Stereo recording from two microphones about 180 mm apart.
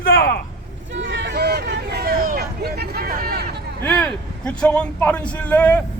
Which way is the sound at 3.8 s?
10° left (ahead or behind).